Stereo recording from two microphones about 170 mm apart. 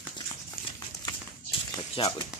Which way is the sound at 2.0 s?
30° left (ahead or behind).